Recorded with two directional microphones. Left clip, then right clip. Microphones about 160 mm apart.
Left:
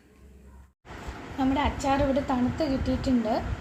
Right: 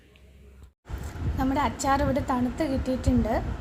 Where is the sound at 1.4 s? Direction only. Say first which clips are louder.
Even; 35° right (ahead or behind).